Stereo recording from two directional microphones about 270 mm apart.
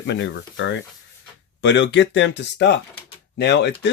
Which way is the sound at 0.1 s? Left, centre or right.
Left.